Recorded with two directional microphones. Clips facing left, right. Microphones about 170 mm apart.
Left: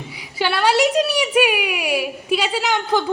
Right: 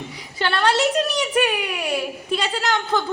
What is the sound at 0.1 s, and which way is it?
A woman's voice, 5° left (ahead or behind).